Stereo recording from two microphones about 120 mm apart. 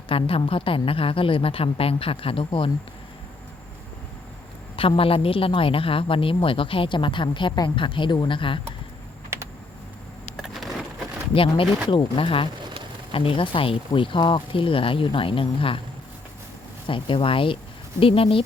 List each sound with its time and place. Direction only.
0.1 s speech: 50° left (ahead or behind)
4.8 s speech: 50° left (ahead or behind)
10.3 s vehicle: centre (ahead or behind)
11.9 s speech: 45° left (ahead or behind)
16.8 s speech: 45° left (ahead or behind)